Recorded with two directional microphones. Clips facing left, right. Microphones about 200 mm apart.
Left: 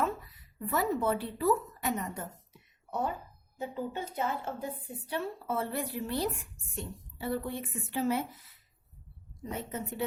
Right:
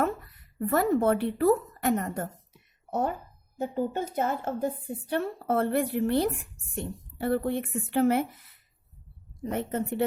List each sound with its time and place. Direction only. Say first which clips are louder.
0.0 s a woman's voice: right 4 dB; 55° right (ahead or behind)